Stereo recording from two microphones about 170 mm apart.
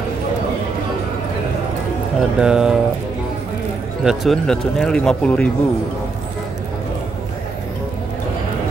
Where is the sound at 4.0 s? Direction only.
Centre (ahead or behind).